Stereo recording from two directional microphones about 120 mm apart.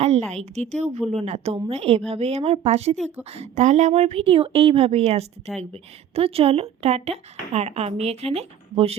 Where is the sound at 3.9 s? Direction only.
60° right (ahead or behind).